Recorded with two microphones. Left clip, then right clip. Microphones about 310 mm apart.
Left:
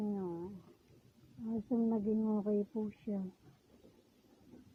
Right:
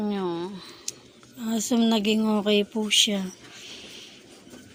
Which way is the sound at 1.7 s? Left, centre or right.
Left.